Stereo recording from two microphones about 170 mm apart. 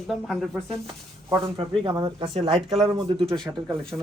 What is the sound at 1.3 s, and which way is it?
Speech, 30° right (ahead or behind).